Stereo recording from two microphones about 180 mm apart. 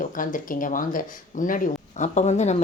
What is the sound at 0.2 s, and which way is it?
A woman's voice, 50° left (ahead or behind).